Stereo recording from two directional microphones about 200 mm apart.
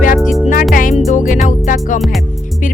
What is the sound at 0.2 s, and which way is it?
Music, centre (ahead or behind).